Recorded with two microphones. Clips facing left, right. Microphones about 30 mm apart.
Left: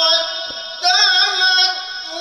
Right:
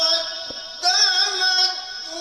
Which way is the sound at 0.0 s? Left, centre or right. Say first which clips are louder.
Left 6 dB; left.